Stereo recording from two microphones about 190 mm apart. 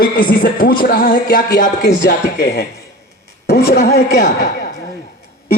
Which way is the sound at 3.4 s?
55° left (ahead or behind).